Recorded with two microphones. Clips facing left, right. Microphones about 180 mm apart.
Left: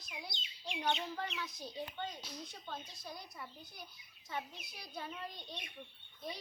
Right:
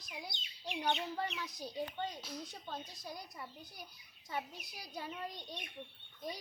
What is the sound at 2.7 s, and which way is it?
Speech, 15° right (ahead or behind).